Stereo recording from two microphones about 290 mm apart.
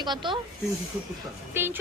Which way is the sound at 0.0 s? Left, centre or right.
Centre.